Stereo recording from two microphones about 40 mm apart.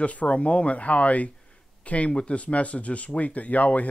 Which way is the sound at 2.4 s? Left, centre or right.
Left.